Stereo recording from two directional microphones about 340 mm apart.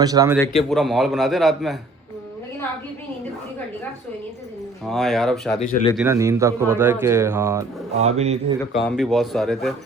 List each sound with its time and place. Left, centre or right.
0.0 s speech: centre
0.3 s a man's voice: centre
4.9 s a man's voice: centre
5.5 s speech: left
6.0 s speech: centre
7.9 s a man's voice: centre
8.8 s a man's voice: centre